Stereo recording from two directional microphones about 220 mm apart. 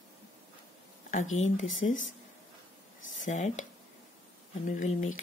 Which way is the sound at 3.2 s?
35° left (ahead or behind).